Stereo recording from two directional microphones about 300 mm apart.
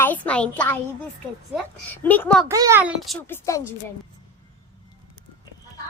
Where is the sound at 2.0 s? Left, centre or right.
Centre.